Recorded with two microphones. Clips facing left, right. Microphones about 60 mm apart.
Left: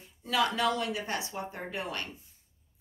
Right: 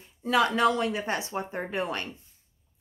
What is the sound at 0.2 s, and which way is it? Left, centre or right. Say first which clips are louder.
A woman's voice: right 5 dB; right.